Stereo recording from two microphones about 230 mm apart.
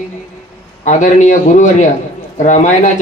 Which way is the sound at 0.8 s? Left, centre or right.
Left.